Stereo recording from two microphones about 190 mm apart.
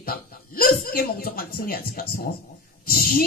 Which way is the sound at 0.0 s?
50° left (ahead or behind).